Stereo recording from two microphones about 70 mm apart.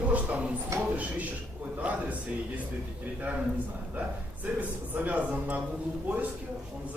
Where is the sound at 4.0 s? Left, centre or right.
Right.